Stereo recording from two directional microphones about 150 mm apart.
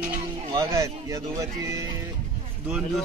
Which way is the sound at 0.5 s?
25° right (ahead or behind).